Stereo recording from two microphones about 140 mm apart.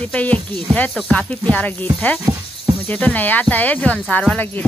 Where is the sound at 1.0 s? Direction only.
5° left (ahead or behind).